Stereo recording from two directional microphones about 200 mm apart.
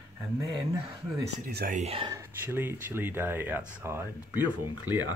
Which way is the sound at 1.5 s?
50° right (ahead or behind).